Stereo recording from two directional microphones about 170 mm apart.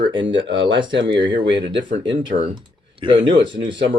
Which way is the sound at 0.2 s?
90° right.